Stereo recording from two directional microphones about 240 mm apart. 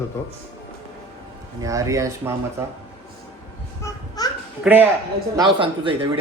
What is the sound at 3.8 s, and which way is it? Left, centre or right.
Babbling, centre.